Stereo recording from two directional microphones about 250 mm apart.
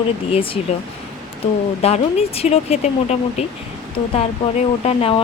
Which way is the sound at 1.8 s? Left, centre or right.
Left.